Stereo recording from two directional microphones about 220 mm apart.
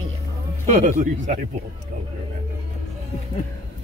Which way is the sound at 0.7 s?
35° right (ahead or behind).